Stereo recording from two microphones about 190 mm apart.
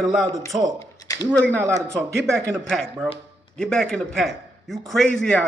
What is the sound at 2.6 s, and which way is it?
A man's voice, 5° left (ahead or behind).